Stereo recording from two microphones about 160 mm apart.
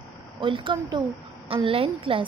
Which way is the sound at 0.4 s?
30° right (ahead or behind).